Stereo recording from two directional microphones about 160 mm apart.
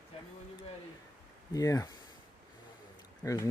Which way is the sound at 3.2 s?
20° left (ahead or behind).